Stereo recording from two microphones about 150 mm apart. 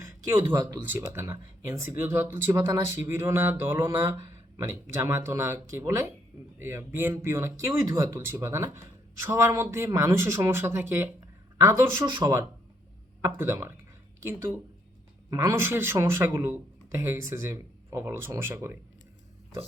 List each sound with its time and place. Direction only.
0.0 s speech: 20° right (ahead or behind)